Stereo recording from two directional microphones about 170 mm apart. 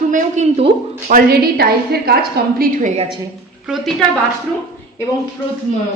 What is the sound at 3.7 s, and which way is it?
Speech, centre (ahead or behind).